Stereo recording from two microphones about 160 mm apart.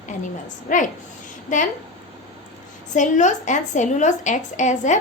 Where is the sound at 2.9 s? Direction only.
50° left (ahead or behind).